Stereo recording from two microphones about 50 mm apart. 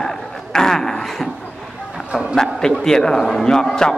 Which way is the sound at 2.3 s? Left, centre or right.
Centre.